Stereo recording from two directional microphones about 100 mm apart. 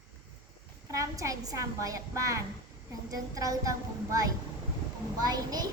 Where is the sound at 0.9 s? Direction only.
35° right (ahead or behind).